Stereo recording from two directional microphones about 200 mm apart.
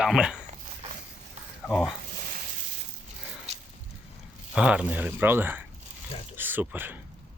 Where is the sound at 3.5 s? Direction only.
30° right (ahead or behind).